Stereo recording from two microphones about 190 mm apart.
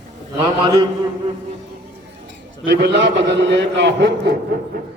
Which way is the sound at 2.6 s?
60° right (ahead or behind).